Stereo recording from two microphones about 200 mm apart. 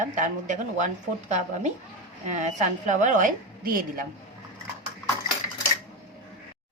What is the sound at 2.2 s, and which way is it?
A woman's voice, 35° right (ahead or behind).